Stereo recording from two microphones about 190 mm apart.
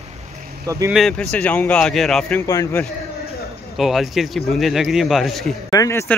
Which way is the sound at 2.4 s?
15° left (ahead or behind).